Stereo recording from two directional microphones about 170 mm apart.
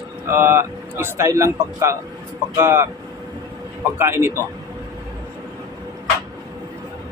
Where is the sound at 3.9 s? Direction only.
15° right (ahead or behind).